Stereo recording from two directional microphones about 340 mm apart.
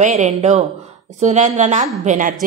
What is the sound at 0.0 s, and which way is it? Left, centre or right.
Speech, centre.